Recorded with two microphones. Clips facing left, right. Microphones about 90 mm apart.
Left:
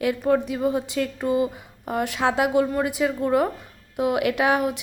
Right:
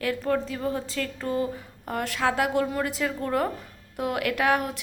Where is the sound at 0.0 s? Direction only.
15° left (ahead or behind).